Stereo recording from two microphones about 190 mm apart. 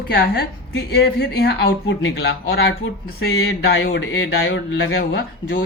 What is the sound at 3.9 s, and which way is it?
Speech, 90° left.